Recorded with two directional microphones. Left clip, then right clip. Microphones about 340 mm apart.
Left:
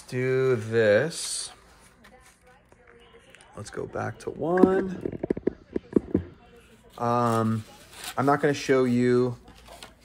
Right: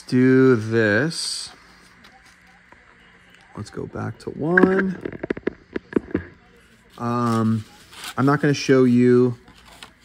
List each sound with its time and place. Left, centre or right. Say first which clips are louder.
0.0 s speech: right 9 dB; right
3.7 s speech: even; centre
4.9 s a sound: right 2 dB; left
7.0 s speech: right 1 dB; centre